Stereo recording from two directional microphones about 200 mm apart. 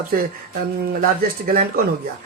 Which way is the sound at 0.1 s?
50° right (ahead or behind).